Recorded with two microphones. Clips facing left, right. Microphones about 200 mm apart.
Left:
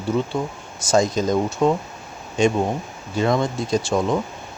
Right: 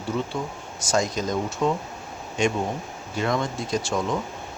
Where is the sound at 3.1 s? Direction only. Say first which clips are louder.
Left 5 dB; 30° left (ahead or behind).